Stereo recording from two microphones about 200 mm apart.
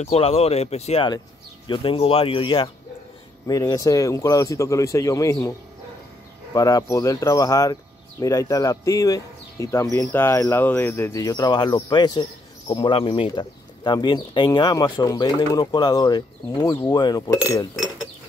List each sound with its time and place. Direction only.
0.0 s speech: 30° left (ahead or behind)
6.5 s speech: 15° left (ahead or behind)